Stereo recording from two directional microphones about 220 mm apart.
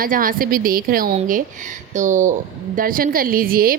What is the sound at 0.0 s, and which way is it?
A woman's voice, 40° right (ahead or behind).